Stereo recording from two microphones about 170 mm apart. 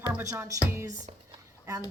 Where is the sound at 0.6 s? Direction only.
15° right (ahead or behind).